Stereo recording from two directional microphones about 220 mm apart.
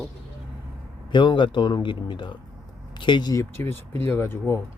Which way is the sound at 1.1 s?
20° left (ahead or behind).